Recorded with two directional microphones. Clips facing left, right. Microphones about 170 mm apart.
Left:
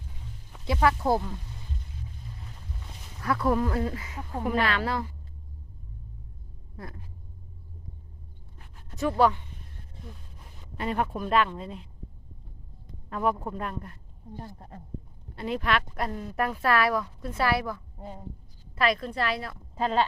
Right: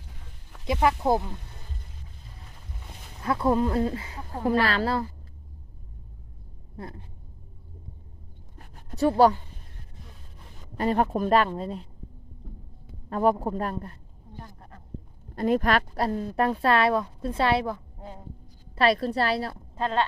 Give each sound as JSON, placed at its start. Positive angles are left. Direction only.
{"t": 0.7, "sound": "speech", "side_deg": -20}
{"t": 3.2, "sound": "speech", "side_deg": -25}
{"t": 6.7, "sound": "speech", "side_deg": -30}
{"t": 8.5, "sound": "a sound", "side_deg": -40}
{"t": 10.8, "sound": "speech", "side_deg": -40}
{"t": 13.1, "sound": "speech", "side_deg": -35}
{"t": 14.3, "sound": "speech", "side_deg": 25}
{"t": 15.4, "sound": "speech", "side_deg": -45}
{"t": 19.7, "sound": "a woman's voice", "side_deg": 5}